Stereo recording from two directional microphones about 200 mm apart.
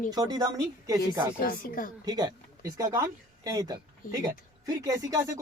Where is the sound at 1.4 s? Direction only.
45° left (ahead or behind).